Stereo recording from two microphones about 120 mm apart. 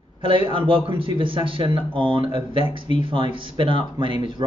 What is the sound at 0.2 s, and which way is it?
A man's voice, 45° right (ahead or behind).